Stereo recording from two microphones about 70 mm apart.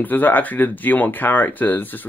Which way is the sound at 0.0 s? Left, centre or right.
Left.